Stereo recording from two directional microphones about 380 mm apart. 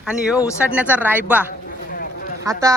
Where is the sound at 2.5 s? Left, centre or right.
Centre.